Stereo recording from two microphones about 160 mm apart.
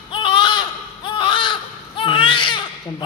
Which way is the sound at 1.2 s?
30° left (ahead or behind).